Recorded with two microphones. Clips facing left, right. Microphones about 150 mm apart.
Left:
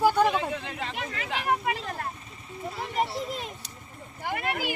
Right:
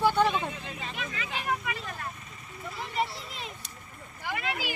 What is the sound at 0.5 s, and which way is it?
Speech, 75° left (ahead or behind).